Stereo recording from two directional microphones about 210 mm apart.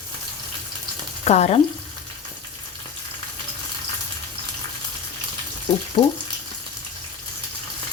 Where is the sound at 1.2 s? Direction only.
30° left (ahead or behind).